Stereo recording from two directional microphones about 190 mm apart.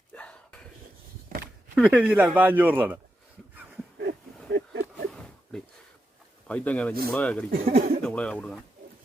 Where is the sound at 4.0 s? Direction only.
55° right (ahead or behind).